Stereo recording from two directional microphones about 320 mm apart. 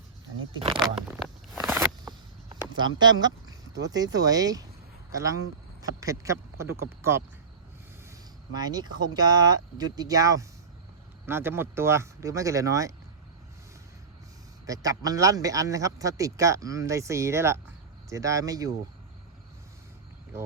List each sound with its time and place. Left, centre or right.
0.5 s speech: centre
0.8 s a sound: centre
5.1 s speech: centre
8.5 s speech: centre
14.7 s speech: centre